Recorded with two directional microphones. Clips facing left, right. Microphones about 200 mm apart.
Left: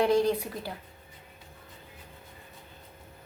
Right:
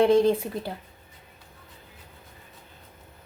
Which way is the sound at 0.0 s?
25° right (ahead or behind).